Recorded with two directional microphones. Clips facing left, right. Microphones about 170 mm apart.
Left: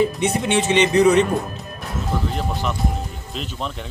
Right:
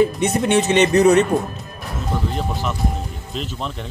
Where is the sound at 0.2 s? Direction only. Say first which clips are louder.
Right 2 dB; 45° right (ahead or behind).